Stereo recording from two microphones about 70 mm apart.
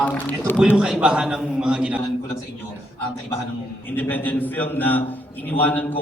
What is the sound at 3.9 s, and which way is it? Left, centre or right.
A man's voice, left.